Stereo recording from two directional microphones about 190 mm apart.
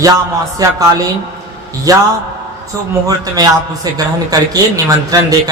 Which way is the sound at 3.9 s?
20° right (ahead or behind).